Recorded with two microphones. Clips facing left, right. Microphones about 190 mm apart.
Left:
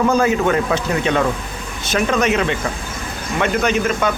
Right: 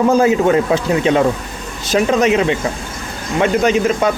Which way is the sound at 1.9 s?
20° right (ahead or behind).